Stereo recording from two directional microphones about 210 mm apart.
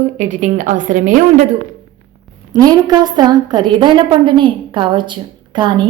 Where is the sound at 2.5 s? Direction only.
20° right (ahead or behind).